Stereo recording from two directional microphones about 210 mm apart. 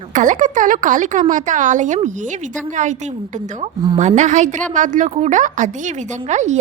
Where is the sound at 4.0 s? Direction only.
35° right (ahead or behind).